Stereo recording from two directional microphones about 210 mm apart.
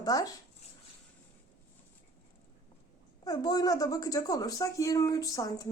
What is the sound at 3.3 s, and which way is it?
Speech, 20° left (ahead or behind).